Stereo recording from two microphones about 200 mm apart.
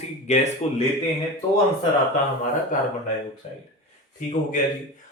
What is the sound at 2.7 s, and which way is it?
Speech, 40° left (ahead or behind).